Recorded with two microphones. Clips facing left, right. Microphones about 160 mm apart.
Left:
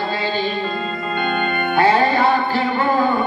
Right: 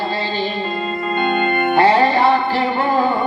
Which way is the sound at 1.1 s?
30° right (ahead or behind).